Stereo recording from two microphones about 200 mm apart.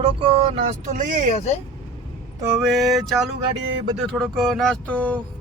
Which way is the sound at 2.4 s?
5° right (ahead or behind).